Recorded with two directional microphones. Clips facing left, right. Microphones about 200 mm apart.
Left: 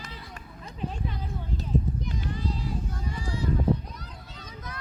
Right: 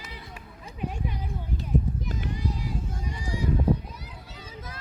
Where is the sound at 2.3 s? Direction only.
15° right (ahead or behind).